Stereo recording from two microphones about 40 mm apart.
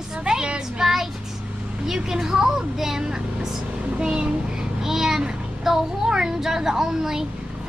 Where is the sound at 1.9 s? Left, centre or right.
Centre.